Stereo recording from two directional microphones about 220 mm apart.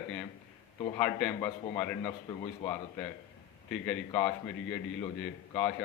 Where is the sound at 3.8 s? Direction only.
5° left (ahead or behind).